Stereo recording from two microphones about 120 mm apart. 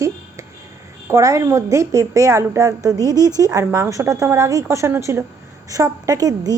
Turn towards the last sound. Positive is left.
turn(degrees=-30)  # may be behind; listen again after turning